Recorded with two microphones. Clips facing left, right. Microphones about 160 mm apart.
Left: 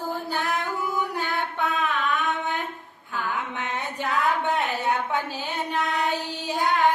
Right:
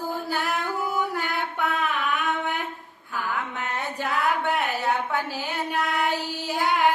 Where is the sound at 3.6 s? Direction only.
20° left (ahead or behind).